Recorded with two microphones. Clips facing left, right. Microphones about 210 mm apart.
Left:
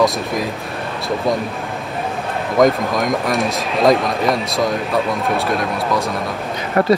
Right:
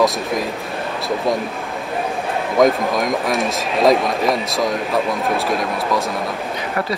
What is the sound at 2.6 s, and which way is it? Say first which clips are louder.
Speech: left 1 dB; centre (ahead or behind).